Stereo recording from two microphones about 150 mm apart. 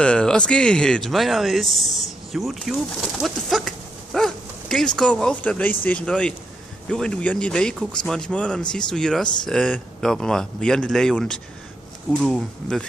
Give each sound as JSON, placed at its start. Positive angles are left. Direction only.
{"t": 0.0, "sound": "speech", "side_deg": 5}
{"t": 3.2, "sound": "a sound", "side_deg": 0}
{"t": 6.9, "sound": "speech", "side_deg": 5}